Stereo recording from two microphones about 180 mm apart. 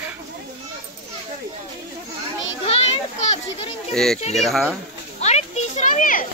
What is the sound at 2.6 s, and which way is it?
Children playing, 35° left (ahead or behind).